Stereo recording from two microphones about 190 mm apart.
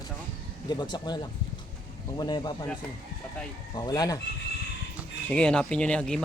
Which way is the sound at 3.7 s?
20° left (ahead or behind).